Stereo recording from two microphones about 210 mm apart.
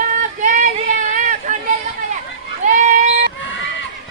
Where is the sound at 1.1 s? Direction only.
40° right (ahead or behind).